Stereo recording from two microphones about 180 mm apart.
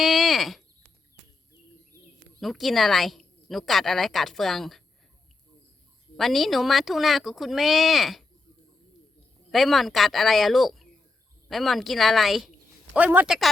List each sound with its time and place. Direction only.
0.0 s a sound: centre (ahead or behind)
2.4 s a woman's voice: centre (ahead or behind)
6.1 s a woman's voice: centre (ahead or behind)
9.5 s a woman's voice: centre (ahead or behind)